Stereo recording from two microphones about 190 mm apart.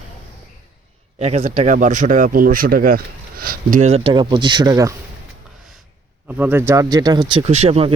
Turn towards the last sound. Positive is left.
turn(degrees=-30)  # may be behind; listen again after turning